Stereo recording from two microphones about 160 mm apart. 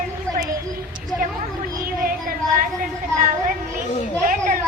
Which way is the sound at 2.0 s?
65° right (ahead or behind).